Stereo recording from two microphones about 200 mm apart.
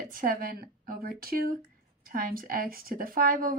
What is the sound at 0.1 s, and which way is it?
Speech, 45° right (ahead or behind).